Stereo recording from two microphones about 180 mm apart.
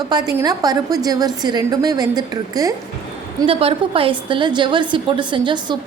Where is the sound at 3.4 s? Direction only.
30° right (ahead or behind).